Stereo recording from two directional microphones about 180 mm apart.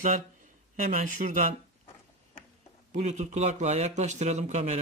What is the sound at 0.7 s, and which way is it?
Speech, 50° right (ahead or behind).